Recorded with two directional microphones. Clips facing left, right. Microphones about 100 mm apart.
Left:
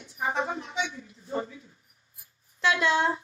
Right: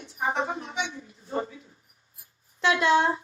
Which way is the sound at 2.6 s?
25° right (ahead or behind).